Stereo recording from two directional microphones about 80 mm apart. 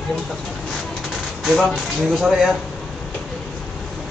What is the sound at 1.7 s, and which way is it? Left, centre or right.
Speech, centre.